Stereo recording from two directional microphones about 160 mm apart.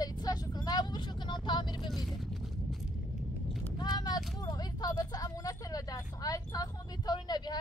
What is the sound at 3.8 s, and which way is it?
Vehicle, 25° left (ahead or behind).